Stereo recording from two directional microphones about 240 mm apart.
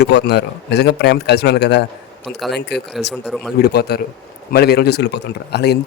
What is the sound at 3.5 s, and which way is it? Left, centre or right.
A man's voice, left.